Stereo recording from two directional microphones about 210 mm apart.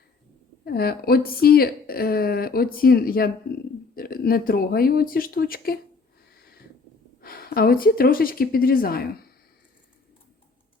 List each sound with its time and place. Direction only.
0.6 s speech: 45° left (ahead or behind)
7.2 s speech: 45° left (ahead or behind)